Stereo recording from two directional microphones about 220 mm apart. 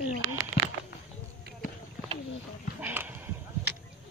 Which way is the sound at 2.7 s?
5° right (ahead or behind).